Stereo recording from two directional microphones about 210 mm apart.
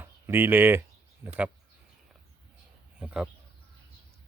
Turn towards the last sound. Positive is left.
turn(degrees=-5)  # may be behind; listen again after turning